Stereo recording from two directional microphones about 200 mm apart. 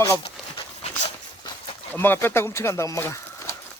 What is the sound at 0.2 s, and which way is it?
Dog, 25° left (ahead or behind).